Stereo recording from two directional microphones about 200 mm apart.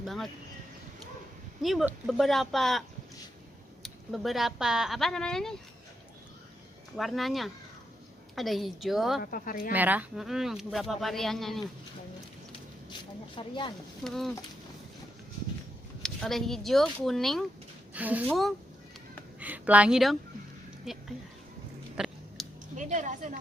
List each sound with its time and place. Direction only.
0.0 s speech: centre (ahead or behind)
1.6 s speech: centre (ahead or behind)
3.8 s speech: centre (ahead or behind)
6.9 s speech: centre (ahead or behind)
9.2 s speech: 45° left (ahead or behind)
9.7 s speech: 10° right (ahead or behind)
12.9 s speech: 25° left (ahead or behind)
14.0 s speech: centre (ahead or behind)
16.0 s speech: centre (ahead or behind)
21.9 s chewing: centre (ahead or behind)
22.7 s speech: 40° right (ahead or behind)